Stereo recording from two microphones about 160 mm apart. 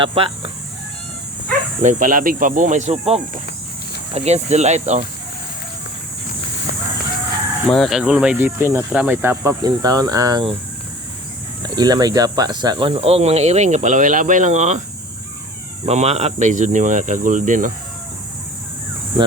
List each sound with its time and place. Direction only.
0.0 s speech: 35° right (ahead or behind)
1.8 s speech: 55° right (ahead or behind)
7.7 s speech: centre (ahead or behind); by 10.5 s 25° right (ahead or behind)
11.8 s speech: 25° right (ahead or behind)
12.9 s speech: 40° right (ahead or behind)
15.9 s speech: 40° right (ahead or behind)
19.2 s speech: 35° right (ahead or behind)